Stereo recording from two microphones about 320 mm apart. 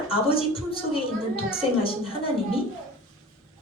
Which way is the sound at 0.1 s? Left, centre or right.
Centre.